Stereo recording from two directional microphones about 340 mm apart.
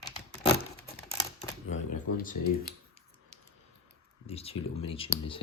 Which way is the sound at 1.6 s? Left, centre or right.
Left.